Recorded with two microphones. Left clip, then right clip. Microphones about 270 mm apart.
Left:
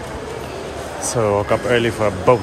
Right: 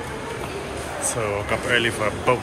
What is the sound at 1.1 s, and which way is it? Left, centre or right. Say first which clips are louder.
Speech: left 8 dB; left.